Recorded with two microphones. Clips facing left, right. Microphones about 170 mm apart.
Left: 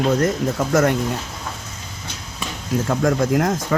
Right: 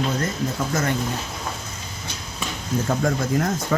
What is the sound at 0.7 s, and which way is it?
Speech, 75° left (ahead or behind).